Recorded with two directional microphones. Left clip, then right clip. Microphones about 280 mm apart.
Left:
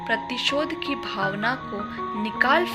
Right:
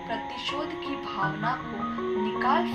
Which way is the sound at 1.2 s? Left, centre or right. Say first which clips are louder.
Left 3 dB; left.